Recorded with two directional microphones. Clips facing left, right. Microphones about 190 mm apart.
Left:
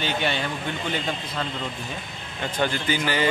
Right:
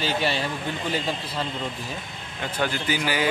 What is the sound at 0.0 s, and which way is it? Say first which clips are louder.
Speech: right 1 dB; 35° right (ahead or behind).